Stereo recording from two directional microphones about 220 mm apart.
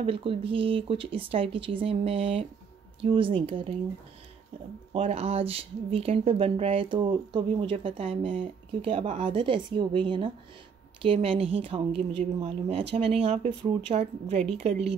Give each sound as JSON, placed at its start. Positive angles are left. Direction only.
{"t": 0.0, "sound": "speech", "side_deg": -25}
{"t": 4.9, "sound": "speech", "side_deg": -30}